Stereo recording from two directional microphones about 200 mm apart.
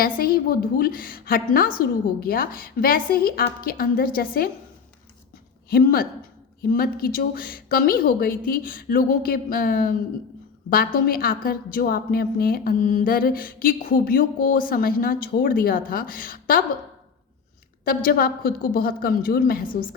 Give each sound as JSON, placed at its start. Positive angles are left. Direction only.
{"t": 0.0, "sound": "a woman's voice", "side_deg": 45}
{"t": 5.6, "sound": "a woman's voice", "side_deg": 50}
{"t": 17.8, "sound": "a woman's voice", "side_deg": 45}